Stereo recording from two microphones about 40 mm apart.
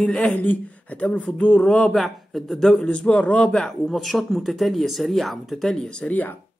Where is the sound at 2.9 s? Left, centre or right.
Left.